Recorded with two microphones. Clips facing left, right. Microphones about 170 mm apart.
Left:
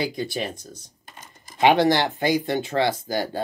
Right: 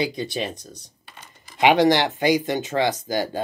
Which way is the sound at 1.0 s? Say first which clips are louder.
Left 2 dB; 45° left (ahead or behind).